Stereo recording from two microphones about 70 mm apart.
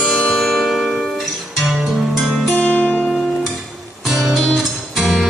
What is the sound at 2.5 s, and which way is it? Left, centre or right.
Music, left.